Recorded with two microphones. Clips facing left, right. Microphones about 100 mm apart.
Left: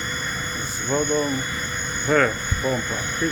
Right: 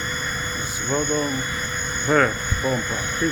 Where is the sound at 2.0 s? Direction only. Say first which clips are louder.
Right 1 dB; 10° right (ahead or behind).